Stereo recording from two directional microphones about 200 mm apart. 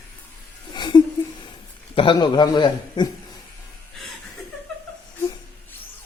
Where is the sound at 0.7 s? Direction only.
20° left (ahead or behind).